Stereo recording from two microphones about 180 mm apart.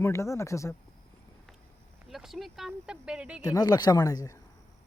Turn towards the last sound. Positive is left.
turn(degrees=20)  # may be behind; listen again after turning